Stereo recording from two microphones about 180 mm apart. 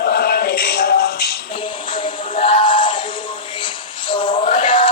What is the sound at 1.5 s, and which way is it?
Music, 30° left (ahead or behind).